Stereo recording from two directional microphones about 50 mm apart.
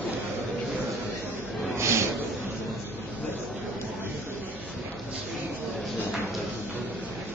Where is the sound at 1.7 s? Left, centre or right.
Right.